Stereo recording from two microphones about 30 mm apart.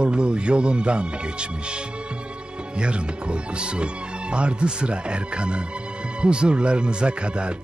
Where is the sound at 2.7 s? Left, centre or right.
Right.